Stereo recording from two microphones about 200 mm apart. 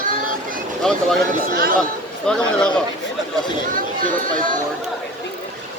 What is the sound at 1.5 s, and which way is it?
Speech, 50° right (ahead or behind).